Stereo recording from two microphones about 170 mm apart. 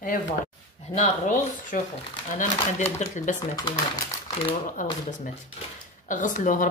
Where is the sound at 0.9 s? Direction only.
50° left (ahead or behind).